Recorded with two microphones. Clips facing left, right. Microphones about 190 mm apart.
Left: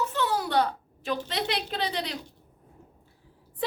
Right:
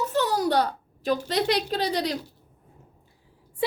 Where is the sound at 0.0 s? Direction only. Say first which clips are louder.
Right 4 dB; 40° right (ahead or behind).